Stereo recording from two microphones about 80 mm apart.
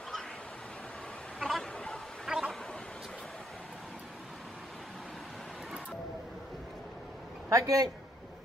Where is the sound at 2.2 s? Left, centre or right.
Centre.